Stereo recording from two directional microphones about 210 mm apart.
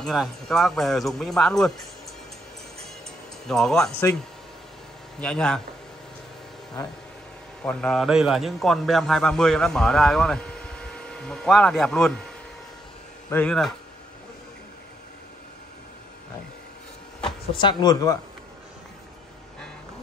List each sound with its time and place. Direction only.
0.0 s a man's voice: centre (ahead or behind)
3.4 s a man's voice: centre (ahead or behind)
5.2 s a man's voice: 5° left (ahead or behind)
7.6 s a man's voice: 5° left (ahead or behind)
13.3 s a man's voice: 5° left (ahead or behind)
17.2 s speech: 20° left (ahead or behind)